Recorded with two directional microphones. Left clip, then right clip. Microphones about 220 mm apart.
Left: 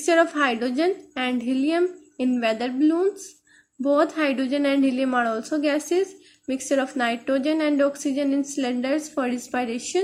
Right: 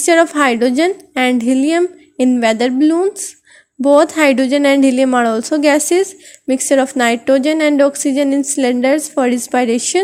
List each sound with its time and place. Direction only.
0.0 s a woman's voice: 35° right (ahead or behind)